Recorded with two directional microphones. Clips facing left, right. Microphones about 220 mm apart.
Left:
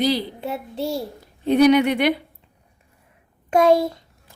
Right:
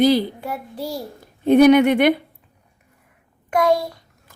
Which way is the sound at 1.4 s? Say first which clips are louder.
Right 3 dB; 50° right (ahead or behind).